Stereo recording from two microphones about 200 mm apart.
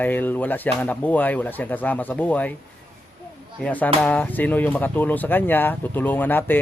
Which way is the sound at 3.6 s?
10° left (ahead or behind).